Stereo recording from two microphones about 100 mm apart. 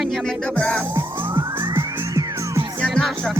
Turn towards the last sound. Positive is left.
turn(degrees=5)  # may be behind; listen again after turning